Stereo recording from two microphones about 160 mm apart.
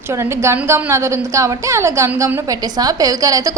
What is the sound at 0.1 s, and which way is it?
A woman's voice, 15° right (ahead or behind).